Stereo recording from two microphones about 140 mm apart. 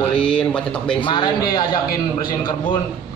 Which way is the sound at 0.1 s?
5° left (ahead or behind).